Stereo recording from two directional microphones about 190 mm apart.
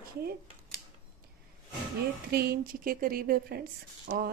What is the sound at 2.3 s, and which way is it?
A woman's voice, 55° right (ahead or behind).